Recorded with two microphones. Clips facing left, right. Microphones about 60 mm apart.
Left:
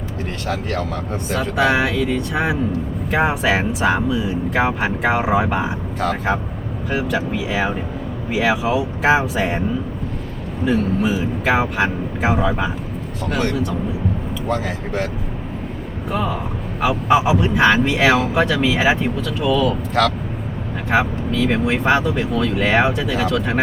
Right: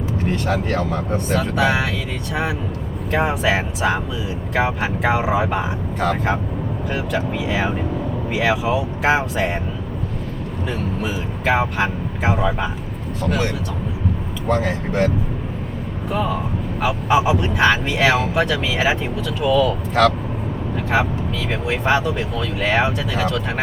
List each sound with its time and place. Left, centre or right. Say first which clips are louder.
0.5 s speech: right 2 dB; centre
1.1 s speech: even; centre
10.7 s speech: left 7 dB; centre
16.1 s speech: right 1 dB; centre